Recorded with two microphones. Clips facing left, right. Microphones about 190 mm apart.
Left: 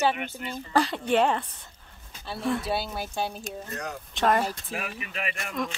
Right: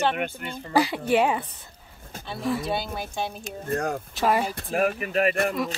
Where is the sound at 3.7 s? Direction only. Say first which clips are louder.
Right 12 dB; 50° right (ahead or behind).